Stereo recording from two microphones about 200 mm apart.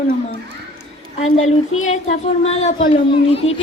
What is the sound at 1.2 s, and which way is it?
Speech, 35° left (ahead or behind).